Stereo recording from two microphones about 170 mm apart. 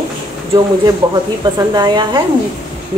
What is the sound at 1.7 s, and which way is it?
Speech, 25° right (ahead or behind).